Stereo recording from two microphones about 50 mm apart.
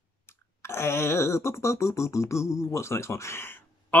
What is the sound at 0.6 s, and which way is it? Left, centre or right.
Music, left.